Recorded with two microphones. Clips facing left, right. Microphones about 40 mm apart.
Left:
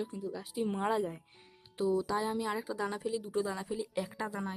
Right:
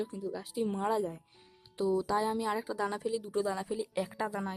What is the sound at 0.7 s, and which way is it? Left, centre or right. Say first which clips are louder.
Speech: even; left.